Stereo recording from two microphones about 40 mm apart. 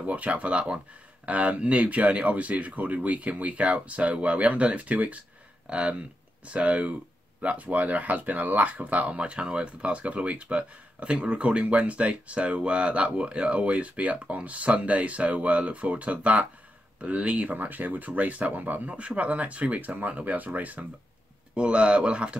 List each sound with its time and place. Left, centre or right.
0.0 s speech: right
9.2 s speech: right
18.9 s speech: right
21.5 s speech: right